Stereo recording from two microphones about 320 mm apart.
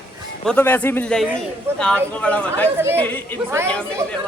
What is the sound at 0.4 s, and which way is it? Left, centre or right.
A woman's voice, centre.